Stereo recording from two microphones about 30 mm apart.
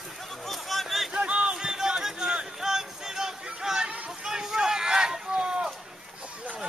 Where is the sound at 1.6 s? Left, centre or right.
Right.